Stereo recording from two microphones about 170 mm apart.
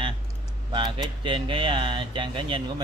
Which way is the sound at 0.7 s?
30° right (ahead or behind).